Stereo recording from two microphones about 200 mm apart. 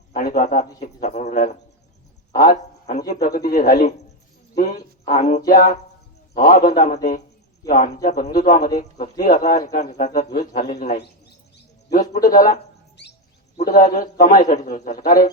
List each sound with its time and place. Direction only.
0.1 s speech: 45° left (ahead or behind)
2.3 s a sound: 45° left (ahead or behind)
3.1 s a man's voice: 50° left (ahead or behind)
11.9 s a man's voice: 45° left (ahead or behind)
13.6 s a man's voice: 45° left (ahead or behind)